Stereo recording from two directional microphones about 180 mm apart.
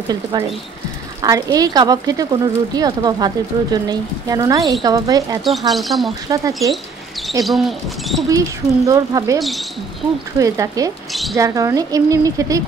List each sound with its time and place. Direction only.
0.1 s speech: 20° right (ahead or behind)
5.4 s speech: centre (ahead or behind)
6.2 s speech: 20° right (ahead or behind)
7.4 s speech: centre (ahead or behind)
8.3 s speech: 20° right (ahead or behind)
9.4 s speech: centre (ahead or behind)
10.4 s speech: 20° right (ahead or behind)